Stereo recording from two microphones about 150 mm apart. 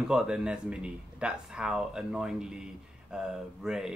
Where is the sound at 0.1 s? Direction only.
5° right (ahead or behind).